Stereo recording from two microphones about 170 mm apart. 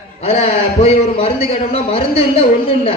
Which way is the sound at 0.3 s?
35° left (ahead or behind).